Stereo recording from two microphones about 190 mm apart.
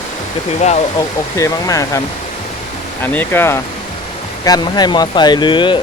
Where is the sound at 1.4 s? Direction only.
15° left (ahead or behind).